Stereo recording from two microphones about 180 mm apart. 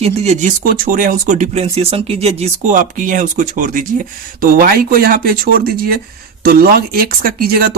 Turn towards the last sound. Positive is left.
turn(degrees=-55)  # may be behind; listen again after turning